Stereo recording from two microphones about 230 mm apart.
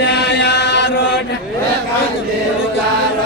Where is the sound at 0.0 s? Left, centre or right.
Left.